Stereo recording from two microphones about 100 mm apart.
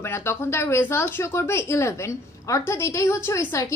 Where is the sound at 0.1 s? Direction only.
25° left (ahead or behind).